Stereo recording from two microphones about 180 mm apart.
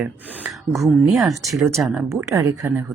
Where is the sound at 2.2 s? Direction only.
15° right (ahead or behind).